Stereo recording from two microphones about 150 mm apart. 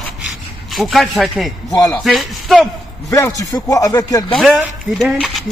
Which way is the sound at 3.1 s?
20° left (ahead or behind).